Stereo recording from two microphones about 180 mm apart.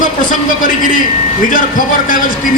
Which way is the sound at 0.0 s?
45° left (ahead or behind).